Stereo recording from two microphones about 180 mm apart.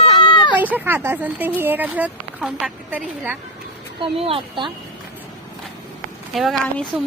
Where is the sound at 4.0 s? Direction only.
30° right (ahead or behind).